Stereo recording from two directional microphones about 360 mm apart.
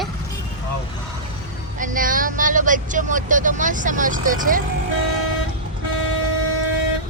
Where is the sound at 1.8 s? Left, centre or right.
Right.